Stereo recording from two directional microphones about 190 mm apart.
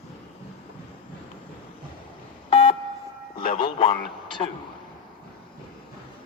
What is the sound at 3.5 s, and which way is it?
Speech, 30° left (ahead or behind).